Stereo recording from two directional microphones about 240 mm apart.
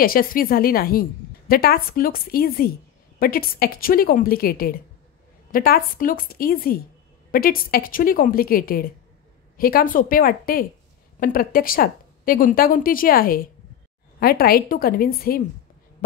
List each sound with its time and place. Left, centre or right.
0.0 s a woman's voice: left